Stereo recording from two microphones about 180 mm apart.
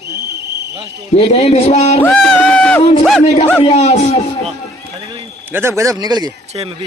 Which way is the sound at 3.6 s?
35° left (ahead or behind).